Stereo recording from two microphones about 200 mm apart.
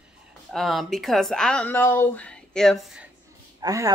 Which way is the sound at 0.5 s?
Centre (ahead or behind).